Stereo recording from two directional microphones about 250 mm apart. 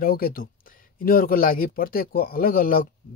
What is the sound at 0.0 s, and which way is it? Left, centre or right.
Speech, left.